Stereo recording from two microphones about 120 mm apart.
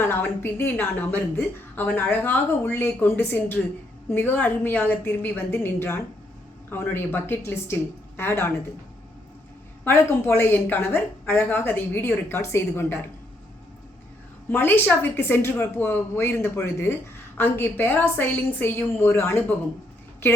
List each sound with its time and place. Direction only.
0.0 s a woman's voice: 20° left (ahead or behind)
9.8 s a woman's voice: 20° left (ahead or behind)
14.5 s a woman's voice: 15° left (ahead or behind)